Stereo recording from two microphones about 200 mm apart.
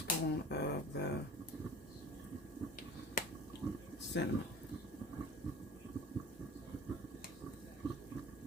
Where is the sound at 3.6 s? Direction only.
5° right (ahead or behind).